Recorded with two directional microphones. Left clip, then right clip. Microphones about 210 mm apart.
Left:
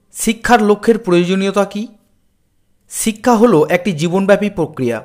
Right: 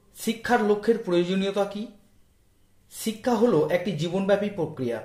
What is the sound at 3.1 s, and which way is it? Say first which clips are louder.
Speech: left 11 dB; 35° left (ahead or behind).